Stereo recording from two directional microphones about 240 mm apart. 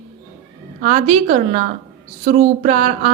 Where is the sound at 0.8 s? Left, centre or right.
Right.